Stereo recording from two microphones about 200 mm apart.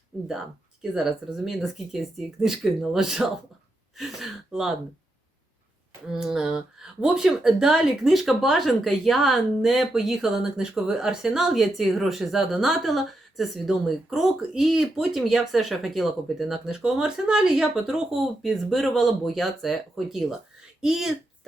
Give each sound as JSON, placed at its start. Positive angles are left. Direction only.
{"t": 0.3, "sound": "speech", "side_deg": 0}
{"t": 6.1, "sound": "speech", "side_deg": -5}